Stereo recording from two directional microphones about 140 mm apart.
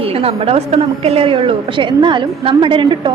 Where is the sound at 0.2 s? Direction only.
45° right (ahead or behind).